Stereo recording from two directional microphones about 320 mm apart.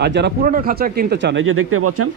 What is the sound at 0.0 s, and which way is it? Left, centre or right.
Speech, right.